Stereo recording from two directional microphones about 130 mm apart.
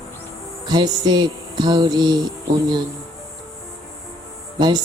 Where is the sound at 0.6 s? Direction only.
30° right (ahead or behind).